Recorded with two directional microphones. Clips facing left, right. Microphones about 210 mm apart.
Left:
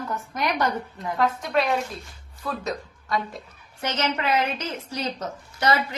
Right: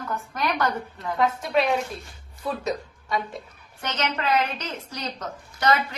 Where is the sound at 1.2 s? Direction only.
Centre (ahead or behind).